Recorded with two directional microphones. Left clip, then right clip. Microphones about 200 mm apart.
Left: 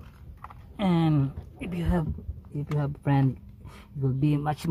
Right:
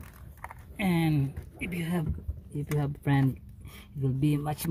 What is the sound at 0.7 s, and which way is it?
Speech, 15° left (ahead or behind).